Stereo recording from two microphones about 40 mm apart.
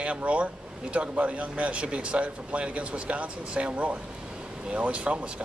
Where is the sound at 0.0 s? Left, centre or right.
Right.